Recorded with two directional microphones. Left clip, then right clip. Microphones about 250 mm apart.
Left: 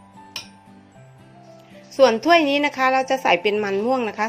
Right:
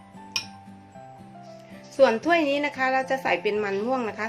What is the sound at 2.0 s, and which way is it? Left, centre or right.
A woman's voice, left.